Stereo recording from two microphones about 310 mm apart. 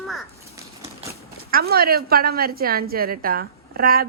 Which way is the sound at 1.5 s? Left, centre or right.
Right.